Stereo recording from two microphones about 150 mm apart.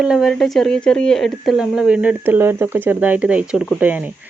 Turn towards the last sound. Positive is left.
turn(degrees=-10)  # may be behind; listen again after turning